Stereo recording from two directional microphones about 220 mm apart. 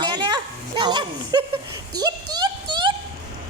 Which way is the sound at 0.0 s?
20° right (ahead or behind).